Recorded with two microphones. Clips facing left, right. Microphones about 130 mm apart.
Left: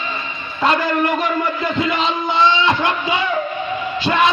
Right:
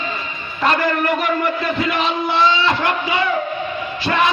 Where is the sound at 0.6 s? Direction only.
20° left (ahead or behind).